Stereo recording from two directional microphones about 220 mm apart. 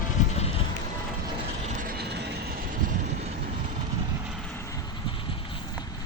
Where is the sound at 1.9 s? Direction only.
50° right (ahead or behind).